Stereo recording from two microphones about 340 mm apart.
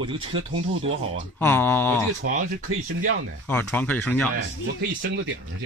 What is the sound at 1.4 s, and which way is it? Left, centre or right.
Speech, centre.